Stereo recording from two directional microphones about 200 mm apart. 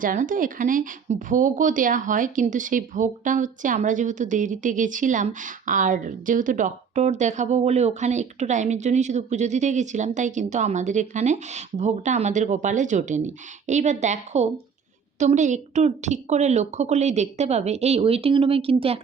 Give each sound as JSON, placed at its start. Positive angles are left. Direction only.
{"t": 0.0, "sound": "a woman's voice", "side_deg": -40}